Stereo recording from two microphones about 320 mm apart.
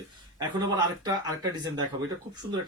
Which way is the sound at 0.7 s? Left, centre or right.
Centre.